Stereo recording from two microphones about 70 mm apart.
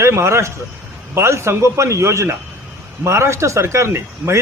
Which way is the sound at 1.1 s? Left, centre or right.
Right.